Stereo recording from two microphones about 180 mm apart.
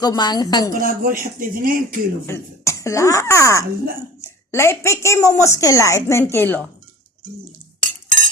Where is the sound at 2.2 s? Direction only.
15° left (ahead or behind).